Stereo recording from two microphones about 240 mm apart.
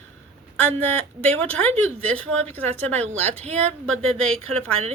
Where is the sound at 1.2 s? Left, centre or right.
Centre.